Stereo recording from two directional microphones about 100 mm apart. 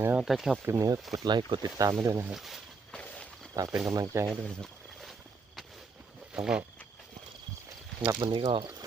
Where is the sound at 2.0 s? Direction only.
30° right (ahead or behind).